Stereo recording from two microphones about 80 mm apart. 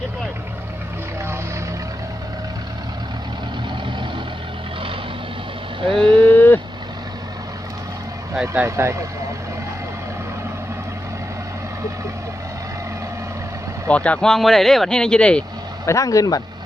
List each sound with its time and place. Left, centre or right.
5.8 s vehicle: right
6.2 s vehicle: left
8.6 s speech: right
13.8 s speech: centre
15.9 s speech: left